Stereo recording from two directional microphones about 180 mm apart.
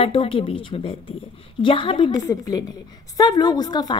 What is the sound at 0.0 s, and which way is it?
A woman's voice, 30° left (ahead or behind).